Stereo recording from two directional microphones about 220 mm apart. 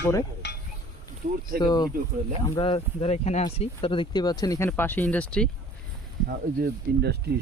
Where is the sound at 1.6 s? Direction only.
20° left (ahead or behind).